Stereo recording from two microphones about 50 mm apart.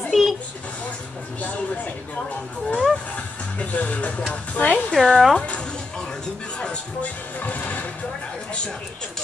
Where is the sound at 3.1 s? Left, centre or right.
Left.